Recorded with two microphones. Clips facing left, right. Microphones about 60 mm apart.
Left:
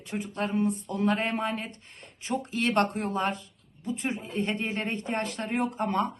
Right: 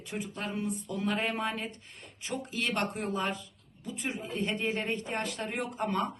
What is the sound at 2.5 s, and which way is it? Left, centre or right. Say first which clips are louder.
Speech: left 7 dB; left.